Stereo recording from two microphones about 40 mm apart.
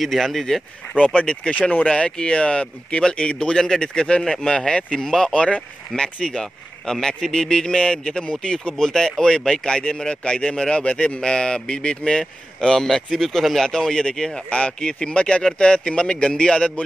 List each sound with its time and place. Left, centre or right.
0.0 s speech: centre
1.1 s a man's voice: left
1.5 s speech: left
1.9 s a man's voice: centre